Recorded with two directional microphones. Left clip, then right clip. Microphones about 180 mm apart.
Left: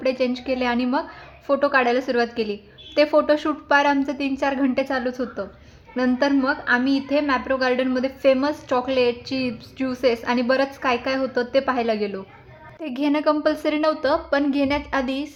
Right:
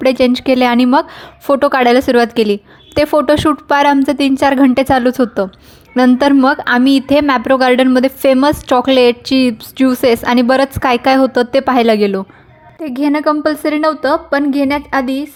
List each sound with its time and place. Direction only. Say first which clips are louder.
0.0 s a woman's voice: right 11 dB; 45° right (ahead or behind)
12.8 s a woman's voice: right 7 dB; 35° right (ahead or behind)